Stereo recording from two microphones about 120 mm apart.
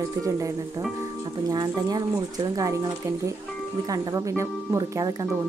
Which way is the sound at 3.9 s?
30° right (ahead or behind).